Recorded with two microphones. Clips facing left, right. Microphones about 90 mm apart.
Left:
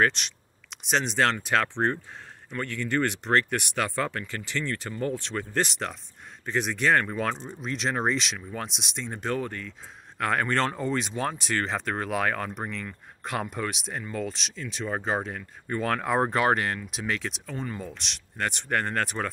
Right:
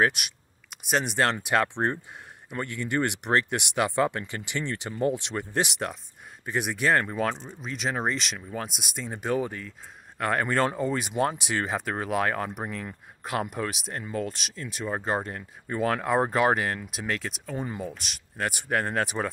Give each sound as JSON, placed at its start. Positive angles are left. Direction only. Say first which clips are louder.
{"t": 0.0, "sound": "speech", "louder": "even", "side_deg": -10}
{"t": 17.6, "sound": "speech", "louder": "right 4 dB", "side_deg": -15}